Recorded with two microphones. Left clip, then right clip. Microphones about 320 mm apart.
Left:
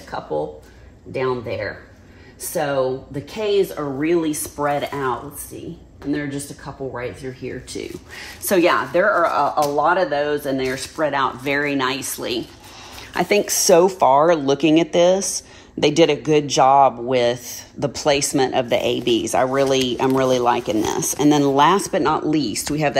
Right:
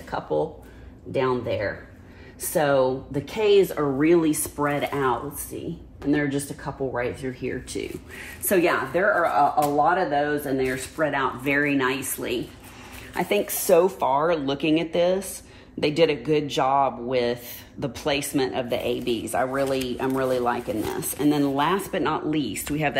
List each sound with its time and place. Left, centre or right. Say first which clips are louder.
0.1 s speech: left 1 dB; centre
8.2 s speech: left 5 dB; centre
13.1 s speech: left 6 dB; left